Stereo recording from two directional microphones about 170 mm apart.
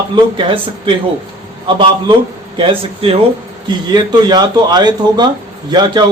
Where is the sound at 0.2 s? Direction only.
30° right (ahead or behind).